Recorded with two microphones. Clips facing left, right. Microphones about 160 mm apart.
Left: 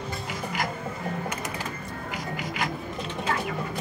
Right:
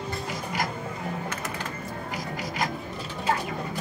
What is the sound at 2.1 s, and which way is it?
Music, 40° right (ahead or behind).